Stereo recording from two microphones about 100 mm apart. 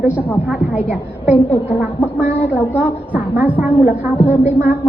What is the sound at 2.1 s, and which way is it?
A woman's voice, 15° right (ahead or behind).